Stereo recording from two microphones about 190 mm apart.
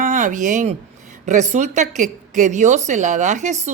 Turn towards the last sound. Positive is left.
turn(degrees=-40)  # may be behind; listen again after turning